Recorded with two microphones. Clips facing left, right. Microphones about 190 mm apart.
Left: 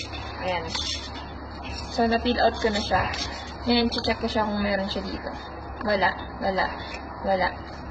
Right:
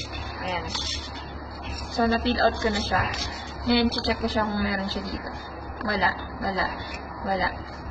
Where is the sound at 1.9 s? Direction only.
20° left (ahead or behind).